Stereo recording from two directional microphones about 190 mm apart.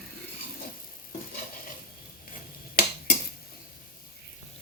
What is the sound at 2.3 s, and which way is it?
Finger snapping, 50° left (ahead or behind).